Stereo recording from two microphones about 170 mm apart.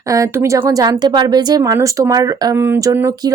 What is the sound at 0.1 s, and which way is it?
Speech, 20° right (ahead or behind).